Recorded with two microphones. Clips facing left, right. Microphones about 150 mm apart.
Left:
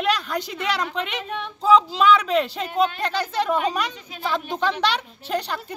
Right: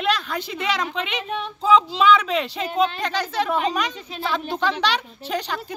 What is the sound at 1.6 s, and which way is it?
Speech, 5° left (ahead or behind).